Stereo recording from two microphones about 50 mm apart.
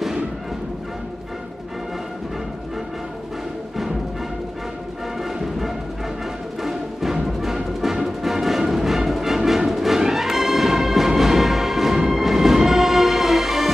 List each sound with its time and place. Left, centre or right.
6.6 s music: centre